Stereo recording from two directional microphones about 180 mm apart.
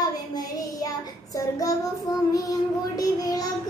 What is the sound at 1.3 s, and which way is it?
Child singing, 20° left (ahead or behind).